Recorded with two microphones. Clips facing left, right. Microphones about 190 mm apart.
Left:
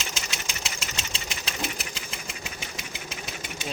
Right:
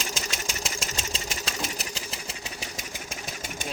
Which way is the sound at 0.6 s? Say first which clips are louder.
Right 3 dB; 45° right (ahead or behind).